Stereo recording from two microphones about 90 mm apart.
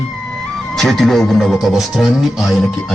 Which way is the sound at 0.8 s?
Centre (ahead or behind).